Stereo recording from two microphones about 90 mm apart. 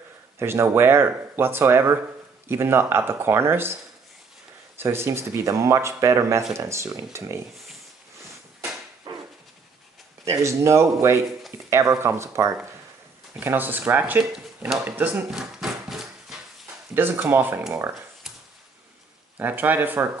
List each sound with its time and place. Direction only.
0.4 s speech: 25° right (ahead or behind)
4.7 s speech: 30° right (ahead or behind)
9.1 s dog: 70° right (ahead or behind)
10.2 s speech: 35° right (ahead or behind); by 14.2 s 20° right (ahead or behind)
14.3 s speech: 5° right (ahead or behind)
14.9 s speech: 20° right (ahead or behind)
15.3 s a sound: 5° right (ahead or behind)
16.9 s speech: 25° right (ahead or behind)
19.3 s speech: 20° right (ahead or behind)